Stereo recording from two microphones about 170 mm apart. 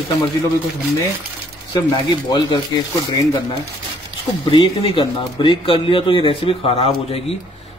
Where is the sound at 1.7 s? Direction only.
25° left (ahead or behind).